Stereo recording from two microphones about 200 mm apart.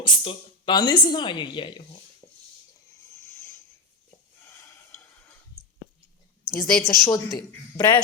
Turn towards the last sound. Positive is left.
turn(degrees=20)  # may be behind; listen again after turning